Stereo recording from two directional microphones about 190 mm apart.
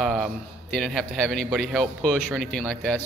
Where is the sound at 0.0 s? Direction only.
Centre (ahead or behind).